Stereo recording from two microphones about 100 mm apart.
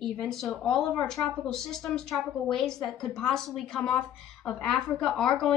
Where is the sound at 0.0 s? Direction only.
5° left (ahead or behind).